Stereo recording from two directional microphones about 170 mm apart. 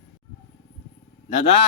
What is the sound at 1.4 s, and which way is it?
Speech, 35° left (ahead or behind).